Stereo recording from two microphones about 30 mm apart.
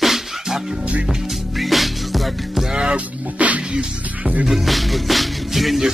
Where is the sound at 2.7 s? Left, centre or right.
Right.